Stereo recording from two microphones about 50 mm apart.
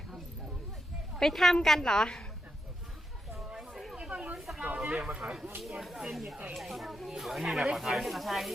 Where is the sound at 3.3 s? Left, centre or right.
Centre.